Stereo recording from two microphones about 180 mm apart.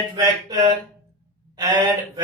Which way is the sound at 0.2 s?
25° right (ahead or behind).